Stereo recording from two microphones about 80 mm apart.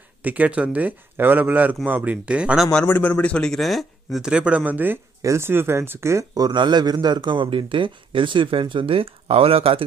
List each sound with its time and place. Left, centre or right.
0.2 s speech: centre
2.9 s speech: centre
4.2 s speech: centre
5.2 s speech: right
6.3 s a man's voice: right